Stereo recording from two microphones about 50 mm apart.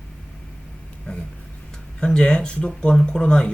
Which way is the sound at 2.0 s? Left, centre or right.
Centre.